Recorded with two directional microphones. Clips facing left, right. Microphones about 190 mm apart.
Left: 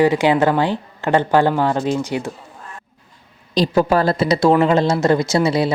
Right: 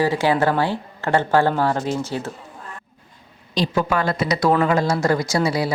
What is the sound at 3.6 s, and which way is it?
A woman's voice, 35° left (ahead or behind).